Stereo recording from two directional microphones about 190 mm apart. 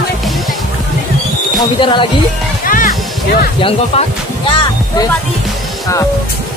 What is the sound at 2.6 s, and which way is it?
Music, 45° left (ahead or behind).